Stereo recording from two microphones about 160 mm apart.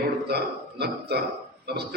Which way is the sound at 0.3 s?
85° right.